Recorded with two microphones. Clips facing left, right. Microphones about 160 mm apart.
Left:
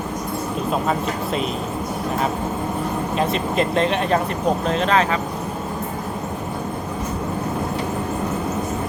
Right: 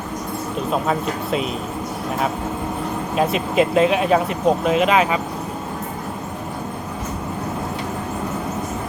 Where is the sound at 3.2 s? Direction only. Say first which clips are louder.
Right 4 dB; 5° right (ahead or behind).